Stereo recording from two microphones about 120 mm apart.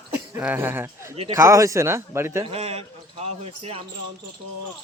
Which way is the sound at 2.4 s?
60° right (ahead or behind).